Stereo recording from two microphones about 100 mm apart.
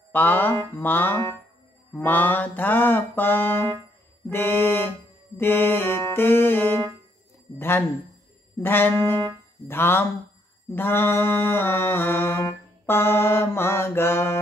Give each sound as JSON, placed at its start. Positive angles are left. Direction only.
{"t": 0.1, "sound": "mantra", "side_deg": 20}